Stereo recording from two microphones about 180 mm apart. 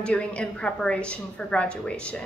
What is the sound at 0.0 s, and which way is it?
A woman's voice, 5° left (ahead or behind).